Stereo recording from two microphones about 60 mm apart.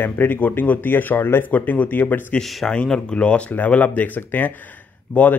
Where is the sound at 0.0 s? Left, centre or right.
Left.